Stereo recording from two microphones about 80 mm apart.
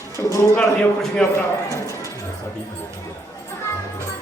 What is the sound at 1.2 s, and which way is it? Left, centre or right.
Speech, centre.